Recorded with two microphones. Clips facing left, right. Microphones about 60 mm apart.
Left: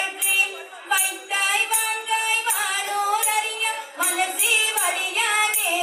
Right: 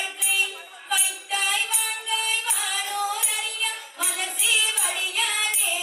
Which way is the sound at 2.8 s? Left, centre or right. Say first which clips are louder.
Left 7 dB; left.